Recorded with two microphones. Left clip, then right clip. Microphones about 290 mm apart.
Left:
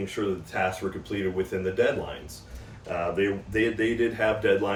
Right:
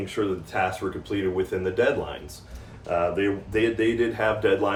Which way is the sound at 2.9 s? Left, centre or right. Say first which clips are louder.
Right 3 dB; centre.